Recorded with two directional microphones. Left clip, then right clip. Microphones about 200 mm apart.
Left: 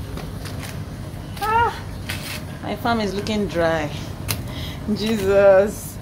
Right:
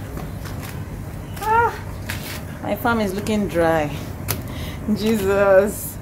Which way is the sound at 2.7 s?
40° right (ahead or behind).